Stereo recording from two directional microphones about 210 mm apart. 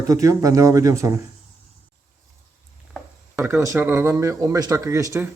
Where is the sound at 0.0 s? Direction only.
15° right (ahead or behind).